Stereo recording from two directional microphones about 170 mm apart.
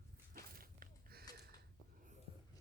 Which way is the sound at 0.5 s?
60° right (ahead or behind).